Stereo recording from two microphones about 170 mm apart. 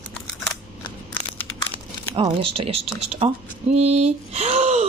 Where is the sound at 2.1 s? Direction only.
30° right (ahead or behind).